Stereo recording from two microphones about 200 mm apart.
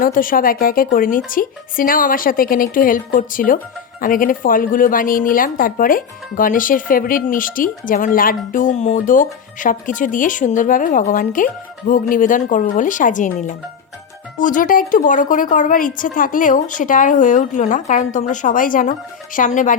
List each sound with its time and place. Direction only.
0.0 s a woman's voice: 45° left (ahead or behind)